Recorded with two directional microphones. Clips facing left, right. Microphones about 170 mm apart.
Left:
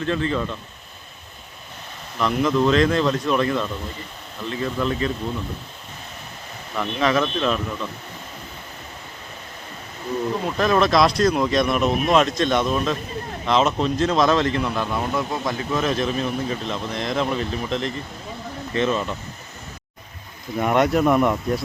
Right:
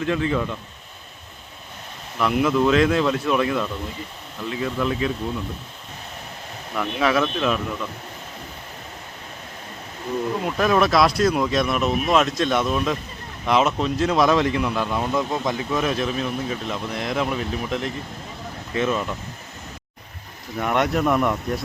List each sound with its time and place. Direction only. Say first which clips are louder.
0.0 s speech: right 1 dB; 10° right (ahead or behind)
2.1 s speech: even; 5° right (ahead or behind)
6.7 s speech: even; 5° right (ahead or behind)
10.4 s speech: even; 10° right (ahead or behind)
15.1 s speech: right 1 dB; 15° right (ahead or behind)
20.6 s speech: left 3 dB; 5° left (ahead or behind)